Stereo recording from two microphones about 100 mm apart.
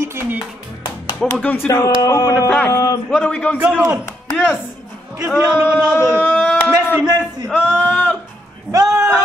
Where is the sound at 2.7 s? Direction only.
40° left (ahead or behind).